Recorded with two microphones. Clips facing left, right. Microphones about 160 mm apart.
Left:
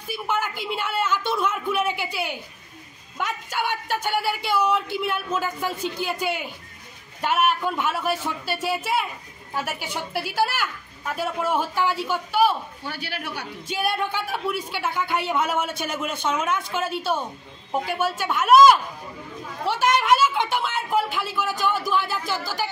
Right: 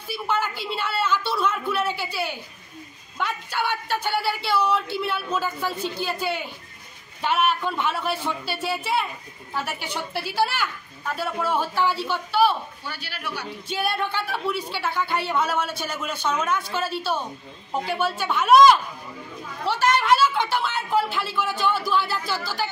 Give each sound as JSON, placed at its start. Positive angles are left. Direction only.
{"t": 0.1, "sound": "a woman's voice", "side_deg": 10}
{"t": 12.8, "sound": "a man's voice", "side_deg": 55}
{"t": 13.7, "sound": "a woman's voice", "side_deg": 10}